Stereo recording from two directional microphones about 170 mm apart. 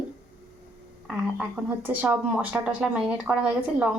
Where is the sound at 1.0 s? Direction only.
5° right (ahead or behind).